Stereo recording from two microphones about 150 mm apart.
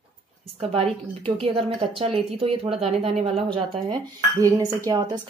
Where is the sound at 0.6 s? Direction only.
40° right (ahead or behind).